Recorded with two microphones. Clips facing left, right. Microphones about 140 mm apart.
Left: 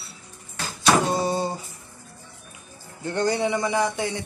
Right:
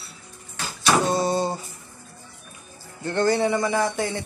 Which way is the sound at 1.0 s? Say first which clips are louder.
Right 2 dB; 10° left (ahead or behind).